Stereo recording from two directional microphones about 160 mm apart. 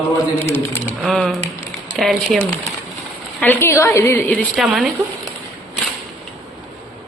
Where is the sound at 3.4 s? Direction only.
15° left (ahead or behind).